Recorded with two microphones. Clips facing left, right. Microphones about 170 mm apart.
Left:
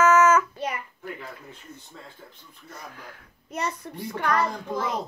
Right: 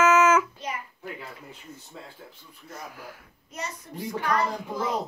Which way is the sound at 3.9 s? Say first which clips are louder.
Left 2 dB; 65° left (ahead or behind).